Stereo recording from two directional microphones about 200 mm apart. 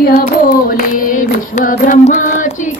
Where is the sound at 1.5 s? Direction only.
40° left (ahead or behind).